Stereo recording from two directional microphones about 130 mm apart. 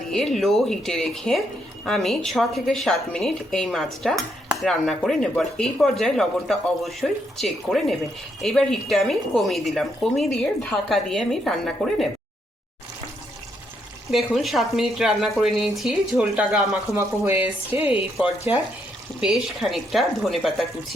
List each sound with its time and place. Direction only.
0.1 s speech: centre (ahead or behind)
14.3 s speech: centre (ahead or behind)
17.7 s speech: 45° left (ahead or behind)
18.2 s speech: 10° right (ahead or behind)